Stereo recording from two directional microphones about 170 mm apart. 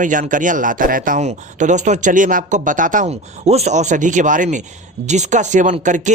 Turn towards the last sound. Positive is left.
turn(degrees=-45)  # may be behind; listen again after turning